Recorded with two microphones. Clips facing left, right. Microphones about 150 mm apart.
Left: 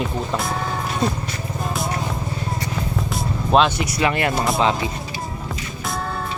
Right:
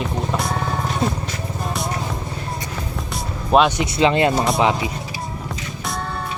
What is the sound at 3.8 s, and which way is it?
Speech, 20° right (ahead or behind).